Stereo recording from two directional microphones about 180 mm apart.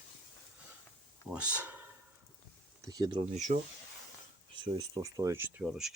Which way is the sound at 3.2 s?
40° right (ahead or behind).